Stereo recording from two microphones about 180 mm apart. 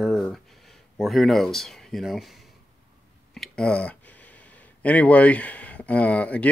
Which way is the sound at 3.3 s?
5° left (ahead or behind).